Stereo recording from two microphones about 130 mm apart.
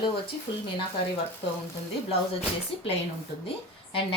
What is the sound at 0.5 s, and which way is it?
Speech, 40° left (ahead or behind).